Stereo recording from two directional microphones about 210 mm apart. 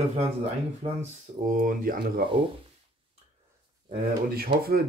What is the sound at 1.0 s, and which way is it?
Speech, 40° right (ahead or behind).